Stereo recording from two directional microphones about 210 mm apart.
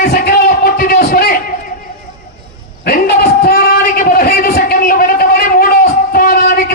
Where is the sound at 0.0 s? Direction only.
45° left (ahead or behind).